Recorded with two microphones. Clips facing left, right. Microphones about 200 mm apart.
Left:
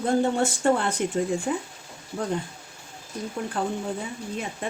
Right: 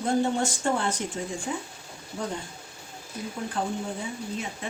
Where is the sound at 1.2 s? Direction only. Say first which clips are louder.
Left 8 dB; 55° left (ahead or behind).